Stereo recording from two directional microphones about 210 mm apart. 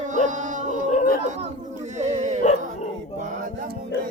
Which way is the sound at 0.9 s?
35° left (ahead or behind).